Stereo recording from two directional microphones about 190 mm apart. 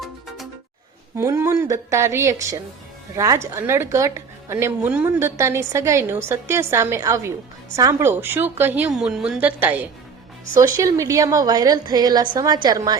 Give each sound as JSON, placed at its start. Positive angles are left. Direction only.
{"t": 1.1, "sound": "a woman's voice", "side_deg": -15}